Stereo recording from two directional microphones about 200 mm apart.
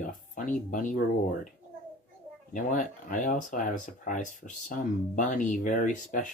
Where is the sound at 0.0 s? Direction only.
40° left (ahead or behind).